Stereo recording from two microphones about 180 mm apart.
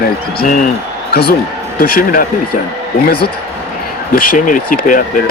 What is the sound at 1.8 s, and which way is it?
Speech, 55° left (ahead or behind).